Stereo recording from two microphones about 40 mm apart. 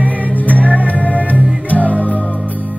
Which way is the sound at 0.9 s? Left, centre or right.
Left.